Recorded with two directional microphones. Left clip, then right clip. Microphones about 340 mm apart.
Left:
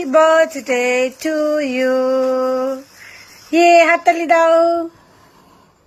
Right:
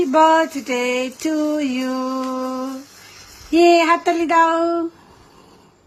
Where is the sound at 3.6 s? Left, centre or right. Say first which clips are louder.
Left 4 dB; centre.